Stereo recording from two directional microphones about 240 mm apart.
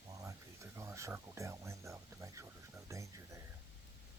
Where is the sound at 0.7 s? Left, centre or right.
Centre.